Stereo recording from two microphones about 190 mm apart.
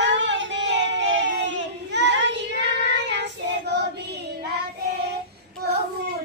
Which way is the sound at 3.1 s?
65° right (ahead or behind).